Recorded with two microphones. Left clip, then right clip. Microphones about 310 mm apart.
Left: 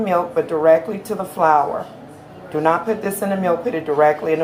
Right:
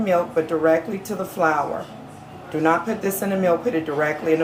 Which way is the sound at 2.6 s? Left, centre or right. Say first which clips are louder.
Left 2 dB; centre.